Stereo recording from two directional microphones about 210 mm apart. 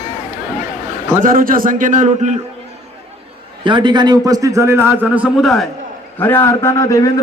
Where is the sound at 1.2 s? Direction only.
40° right (ahead or behind).